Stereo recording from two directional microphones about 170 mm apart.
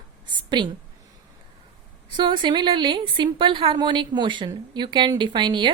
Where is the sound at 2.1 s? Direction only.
30° right (ahead or behind).